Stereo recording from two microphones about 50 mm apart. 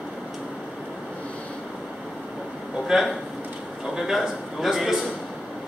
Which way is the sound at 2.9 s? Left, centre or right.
Centre.